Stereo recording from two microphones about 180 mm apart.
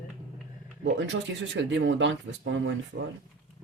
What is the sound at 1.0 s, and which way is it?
Speech, 90° right.